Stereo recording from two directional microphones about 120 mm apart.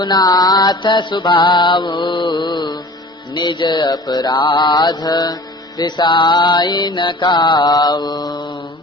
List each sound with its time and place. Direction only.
0.0 s mantra: 35° left (ahead or behind)